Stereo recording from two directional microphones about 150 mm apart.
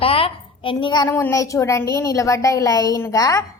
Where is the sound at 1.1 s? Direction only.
20° left (ahead or behind).